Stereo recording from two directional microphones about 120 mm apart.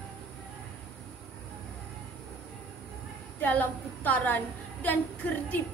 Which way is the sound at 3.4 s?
15° left (ahead or behind).